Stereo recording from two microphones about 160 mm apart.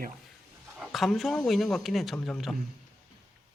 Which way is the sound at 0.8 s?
Centre (ahead or behind).